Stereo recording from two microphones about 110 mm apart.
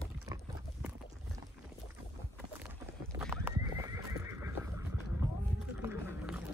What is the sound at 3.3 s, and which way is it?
Horse, 20° right (ahead or behind).